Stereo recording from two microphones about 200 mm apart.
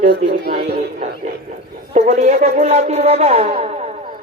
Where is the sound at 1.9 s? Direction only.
35° right (ahead or behind).